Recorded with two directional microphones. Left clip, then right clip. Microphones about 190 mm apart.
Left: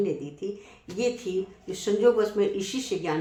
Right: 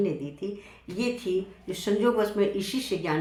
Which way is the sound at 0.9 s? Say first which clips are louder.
Left 1 dB; 15° left (ahead or behind).